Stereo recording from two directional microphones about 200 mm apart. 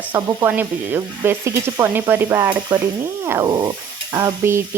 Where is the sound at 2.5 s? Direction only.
20° right (ahead or behind).